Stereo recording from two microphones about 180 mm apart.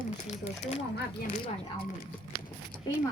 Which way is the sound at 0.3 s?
35° left (ahead or behind).